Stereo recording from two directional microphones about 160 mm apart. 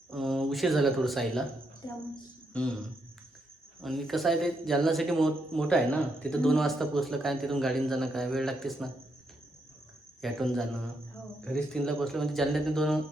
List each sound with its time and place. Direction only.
0.1 s speech: centre (ahead or behind)
1.8 s a woman's voice: 30° left (ahead or behind)
2.5 s a sound: 5° left (ahead or behind)
3.8 s a man's voice: centre (ahead or behind)
10.2 s a man's voice: centre (ahead or behind)